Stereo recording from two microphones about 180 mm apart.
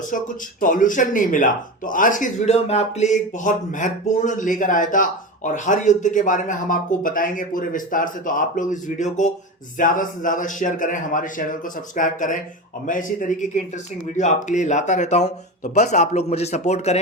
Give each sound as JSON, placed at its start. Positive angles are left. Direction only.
{"t": 0.6, "sound": "speech", "side_deg": 45}